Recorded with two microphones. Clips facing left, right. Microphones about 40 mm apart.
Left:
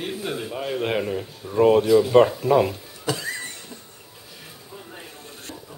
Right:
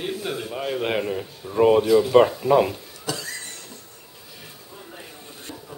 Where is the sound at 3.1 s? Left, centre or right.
Left.